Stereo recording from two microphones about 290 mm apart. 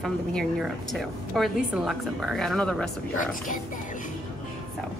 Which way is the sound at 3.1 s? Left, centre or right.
Left.